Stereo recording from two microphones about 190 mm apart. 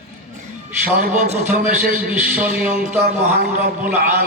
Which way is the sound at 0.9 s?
45° right (ahead or behind).